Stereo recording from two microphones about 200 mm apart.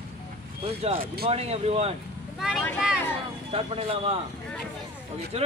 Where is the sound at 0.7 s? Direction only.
30° right (ahead or behind).